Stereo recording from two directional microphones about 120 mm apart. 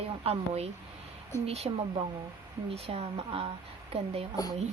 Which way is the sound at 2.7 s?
55° right (ahead or behind).